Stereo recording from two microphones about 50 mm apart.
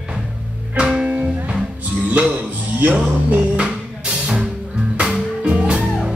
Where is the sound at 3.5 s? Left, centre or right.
Centre.